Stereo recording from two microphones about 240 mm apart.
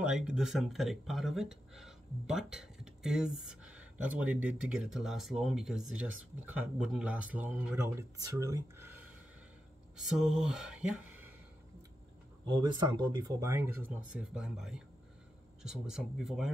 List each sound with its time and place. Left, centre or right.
0.0 s speech: centre
12.4 s speech: centre